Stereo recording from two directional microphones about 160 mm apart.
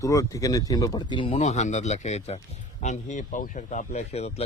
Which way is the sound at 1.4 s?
45° left (ahead or behind).